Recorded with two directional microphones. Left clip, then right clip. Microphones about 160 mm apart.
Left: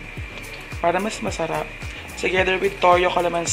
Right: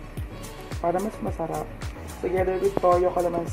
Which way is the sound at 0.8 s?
35° left (ahead or behind).